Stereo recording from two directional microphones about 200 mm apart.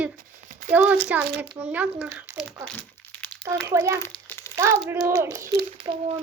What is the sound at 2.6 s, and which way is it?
Crumpling, 5° left (ahead or behind).